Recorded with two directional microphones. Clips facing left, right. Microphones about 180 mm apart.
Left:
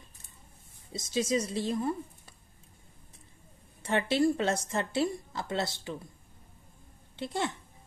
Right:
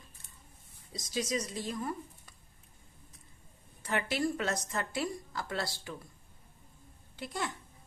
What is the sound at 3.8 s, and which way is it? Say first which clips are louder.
Speech: left 6 dB; 25° left (ahead or behind).